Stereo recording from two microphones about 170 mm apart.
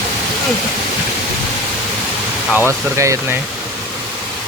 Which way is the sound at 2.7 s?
15° right (ahead or behind).